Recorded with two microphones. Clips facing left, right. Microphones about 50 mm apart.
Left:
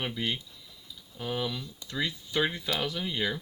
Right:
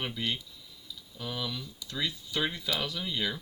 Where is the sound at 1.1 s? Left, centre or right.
Left.